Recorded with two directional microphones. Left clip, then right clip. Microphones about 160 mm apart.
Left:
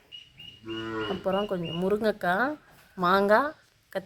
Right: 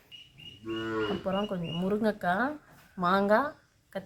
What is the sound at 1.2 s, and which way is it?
Speech, 35° left (ahead or behind).